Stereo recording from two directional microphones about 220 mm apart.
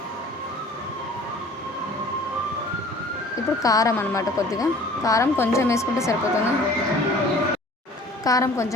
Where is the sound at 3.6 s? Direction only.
15° left (ahead or behind).